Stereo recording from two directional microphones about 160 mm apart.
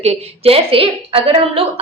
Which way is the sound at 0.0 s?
40° right (ahead or behind).